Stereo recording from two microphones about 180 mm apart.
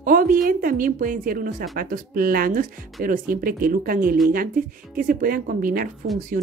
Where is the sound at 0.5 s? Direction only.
50° right (ahead or behind).